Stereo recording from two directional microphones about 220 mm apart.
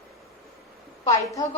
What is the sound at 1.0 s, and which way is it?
Speech, 15° left (ahead or behind).